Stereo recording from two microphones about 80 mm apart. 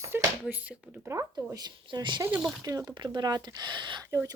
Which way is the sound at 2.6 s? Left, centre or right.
Right.